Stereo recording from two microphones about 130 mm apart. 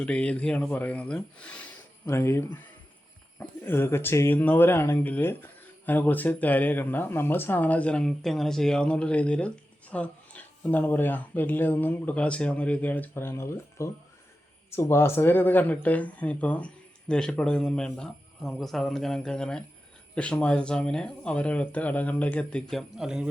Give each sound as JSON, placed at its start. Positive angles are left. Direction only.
{"t": 0.0, "sound": "speech", "side_deg": 10}
{"t": 2.0, "sound": "speech", "side_deg": 20}